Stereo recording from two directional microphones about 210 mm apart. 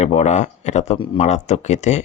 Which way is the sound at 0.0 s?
30° left (ahead or behind).